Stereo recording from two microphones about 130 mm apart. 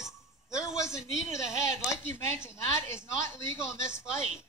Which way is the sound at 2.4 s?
20° left (ahead or behind).